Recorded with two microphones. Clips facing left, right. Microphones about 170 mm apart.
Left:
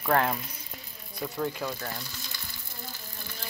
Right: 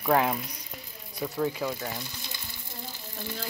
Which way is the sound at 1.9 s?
20° right (ahead or behind).